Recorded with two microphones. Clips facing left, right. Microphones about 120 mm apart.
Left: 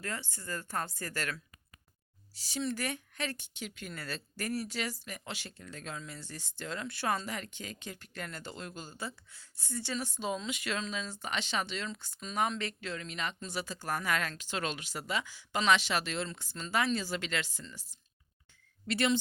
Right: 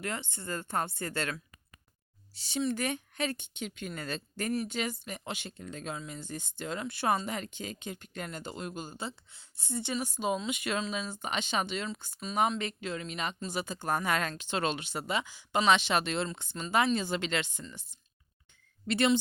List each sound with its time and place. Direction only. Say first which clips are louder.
0.0 s speech: right 3 dB; 25° right (ahead or behind)
18.9 s speech: right 3 dB; 25° right (ahead or behind)